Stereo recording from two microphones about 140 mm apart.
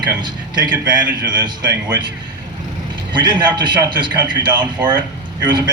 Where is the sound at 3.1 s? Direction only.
35° right (ahead or behind).